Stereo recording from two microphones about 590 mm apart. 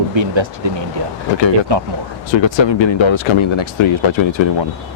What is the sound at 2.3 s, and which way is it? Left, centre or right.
Speech, left.